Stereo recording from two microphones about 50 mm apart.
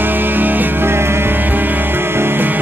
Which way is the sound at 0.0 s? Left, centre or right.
Right.